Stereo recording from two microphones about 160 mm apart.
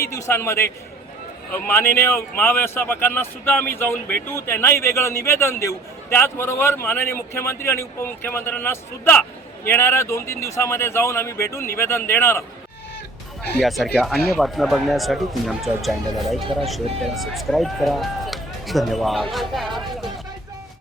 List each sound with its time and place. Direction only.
0.1 s speech: 20° left (ahead or behind)
13.6 s speech: centre (ahead or behind)